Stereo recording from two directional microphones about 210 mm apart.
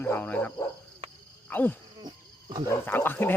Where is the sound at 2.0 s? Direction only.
20° right (ahead or behind).